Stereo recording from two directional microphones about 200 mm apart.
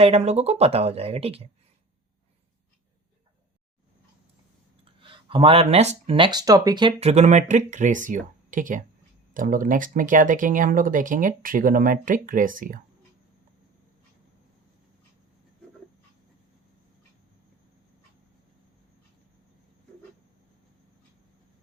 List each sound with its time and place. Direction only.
0.0 s speech: 30° right (ahead or behind)
5.0 s speech: 25° right (ahead or behind); by 12.8 s 45° right (ahead or behind)